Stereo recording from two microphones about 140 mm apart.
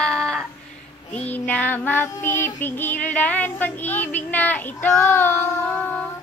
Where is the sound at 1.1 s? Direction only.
10° left (ahead or behind).